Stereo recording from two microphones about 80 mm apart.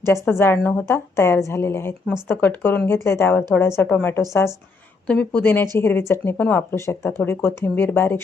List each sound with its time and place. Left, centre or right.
0.0 s speech: left
2.2 s speech: left
4.1 s speech: left
5.0 s a woman's voice: centre